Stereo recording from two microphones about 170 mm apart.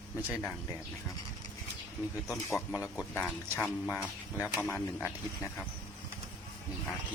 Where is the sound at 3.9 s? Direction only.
5° right (ahead or behind).